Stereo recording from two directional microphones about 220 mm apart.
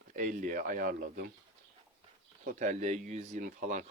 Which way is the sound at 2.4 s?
35° right (ahead or behind).